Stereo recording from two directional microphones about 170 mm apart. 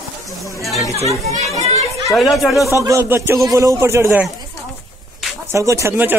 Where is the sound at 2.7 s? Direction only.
15° right (ahead or behind).